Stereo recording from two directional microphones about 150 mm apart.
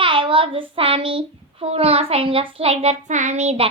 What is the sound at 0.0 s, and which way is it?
A child's voice, 35° right (ahead or behind).